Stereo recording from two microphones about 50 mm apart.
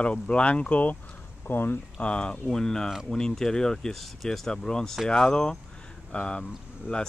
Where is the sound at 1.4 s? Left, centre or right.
Left.